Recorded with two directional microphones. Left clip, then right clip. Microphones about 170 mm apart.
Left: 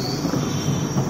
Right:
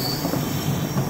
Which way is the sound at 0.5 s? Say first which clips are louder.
Left 1 dB; centre (ahead or behind).